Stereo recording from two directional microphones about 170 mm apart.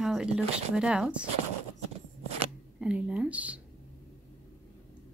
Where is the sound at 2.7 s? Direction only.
5° right (ahead or behind).